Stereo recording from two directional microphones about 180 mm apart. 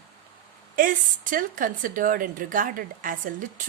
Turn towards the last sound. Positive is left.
turn(degrees=-45)  # may be behind; listen again after turning